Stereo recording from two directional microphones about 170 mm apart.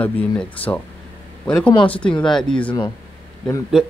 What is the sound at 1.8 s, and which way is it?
Speech, 10° left (ahead or behind).